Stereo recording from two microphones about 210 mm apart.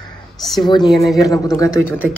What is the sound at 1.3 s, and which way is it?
Speech, 15° left (ahead or behind).